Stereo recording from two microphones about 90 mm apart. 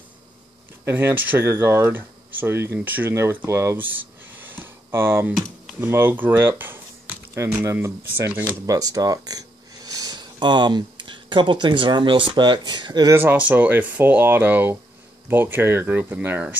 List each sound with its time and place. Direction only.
0.8 s speech: 25° right (ahead or behind)
8.3 s speech: 15° right (ahead or behind)
8.6 s speech: 40° right (ahead or behind); by 13.1 s 55° right (ahead or behind)
13.2 s speech: 20° right (ahead or behind)